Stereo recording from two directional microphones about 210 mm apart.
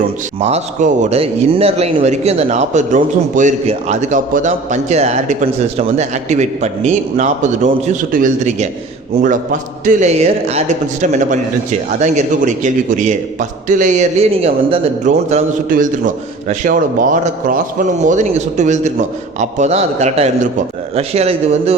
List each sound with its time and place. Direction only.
0.3 s a man's voice: 30° right (ahead or behind)